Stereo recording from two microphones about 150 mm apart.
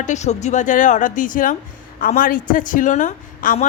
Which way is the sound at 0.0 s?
50° left (ahead or behind).